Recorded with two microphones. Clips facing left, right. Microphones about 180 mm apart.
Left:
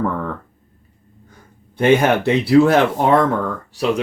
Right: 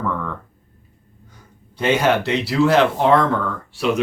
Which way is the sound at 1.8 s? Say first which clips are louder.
Left 4 dB; 55° left (ahead or behind).